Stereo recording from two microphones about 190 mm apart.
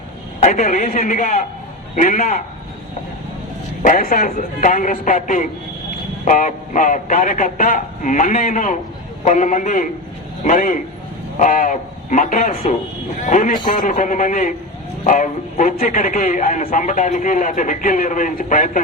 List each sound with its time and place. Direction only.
0.3 s a man's voice: 40° left (ahead or behind)
3.8 s a man's voice: 45° left (ahead or behind)